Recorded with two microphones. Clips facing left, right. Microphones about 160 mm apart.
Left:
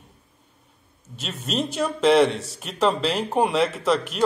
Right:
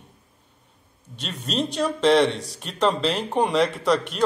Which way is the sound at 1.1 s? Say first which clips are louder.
Even; centre (ahead or behind).